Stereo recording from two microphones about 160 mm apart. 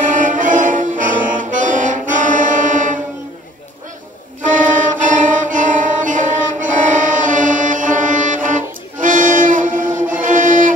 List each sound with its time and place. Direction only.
0.1 s brass instrument: 55° right (ahead or behind)
4.4 s violin: 55° right (ahead or behind)